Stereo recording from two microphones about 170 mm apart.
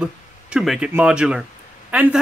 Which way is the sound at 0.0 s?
5° right (ahead or behind).